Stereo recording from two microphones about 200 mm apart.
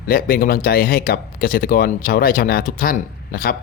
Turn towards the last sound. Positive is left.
turn(degrees=45)  # may be behind; listen again after turning